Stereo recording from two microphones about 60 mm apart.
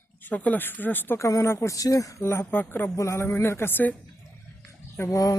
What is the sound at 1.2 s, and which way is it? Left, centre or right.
Speech, left.